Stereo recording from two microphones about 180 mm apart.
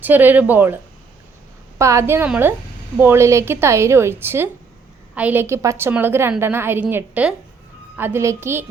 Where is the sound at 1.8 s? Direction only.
15° right (ahead or behind).